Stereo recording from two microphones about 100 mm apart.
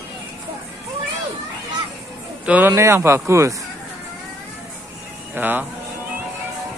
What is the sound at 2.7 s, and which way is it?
Speech, 25° right (ahead or behind).